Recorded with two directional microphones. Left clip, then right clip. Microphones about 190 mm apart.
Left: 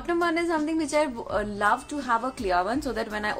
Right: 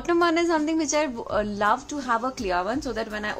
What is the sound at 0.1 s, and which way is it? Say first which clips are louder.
A woman's voice: right 4 dB; 15° right (ahead or behind).